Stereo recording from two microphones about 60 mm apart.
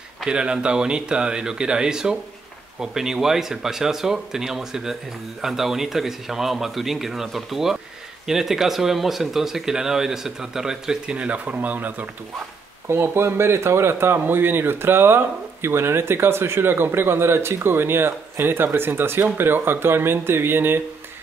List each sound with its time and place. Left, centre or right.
0.2 s speech: centre
11.1 s speech: right
12.8 s speech: right